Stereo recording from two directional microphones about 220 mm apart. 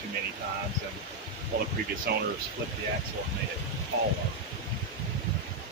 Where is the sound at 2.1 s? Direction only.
45° right (ahead or behind).